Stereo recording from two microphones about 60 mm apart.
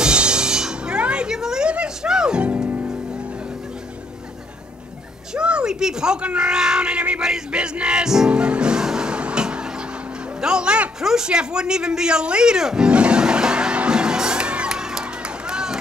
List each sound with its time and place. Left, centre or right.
0.0 s music: centre
5.3 s speech: centre
8.3 s music: centre
10.4 s a sound: centre